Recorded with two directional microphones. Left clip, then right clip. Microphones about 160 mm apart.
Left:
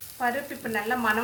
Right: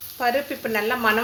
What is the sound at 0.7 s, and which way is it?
Speech, 40° right (ahead or behind).